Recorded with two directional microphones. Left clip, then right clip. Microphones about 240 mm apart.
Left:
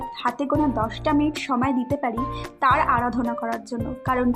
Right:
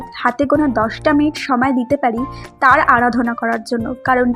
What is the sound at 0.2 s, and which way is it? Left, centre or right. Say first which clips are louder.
A woman's voice: right 8 dB; centre.